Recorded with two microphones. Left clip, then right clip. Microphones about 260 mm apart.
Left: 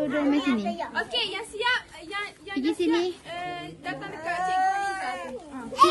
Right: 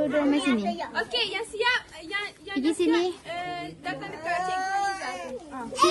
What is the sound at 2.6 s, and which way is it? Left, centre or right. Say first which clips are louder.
Speech: right 1 dB; centre.